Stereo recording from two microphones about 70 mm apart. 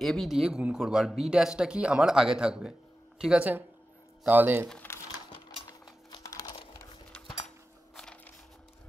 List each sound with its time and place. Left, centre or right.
0.0 s speech: centre
4.3 s speech: right
5.7 s cutlery: left
7.9 s a sound: centre